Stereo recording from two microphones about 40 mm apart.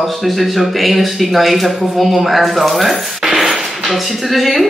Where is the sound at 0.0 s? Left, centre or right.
Centre.